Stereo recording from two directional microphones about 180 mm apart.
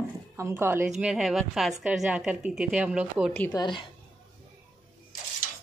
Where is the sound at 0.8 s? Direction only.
Centre (ahead or behind).